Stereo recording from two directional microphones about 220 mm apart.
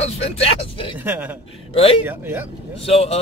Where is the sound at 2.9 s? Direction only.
30° left (ahead or behind).